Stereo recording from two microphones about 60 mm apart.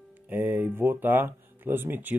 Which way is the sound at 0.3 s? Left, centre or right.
Right.